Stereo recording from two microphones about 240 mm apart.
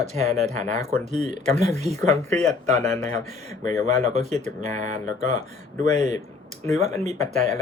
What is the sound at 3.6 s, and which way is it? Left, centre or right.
Speech, right.